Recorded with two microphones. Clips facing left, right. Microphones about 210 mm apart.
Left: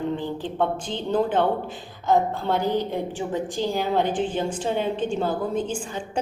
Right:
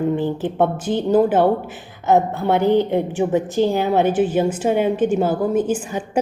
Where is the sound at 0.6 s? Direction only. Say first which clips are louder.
Right 7 dB; 50° right (ahead or behind).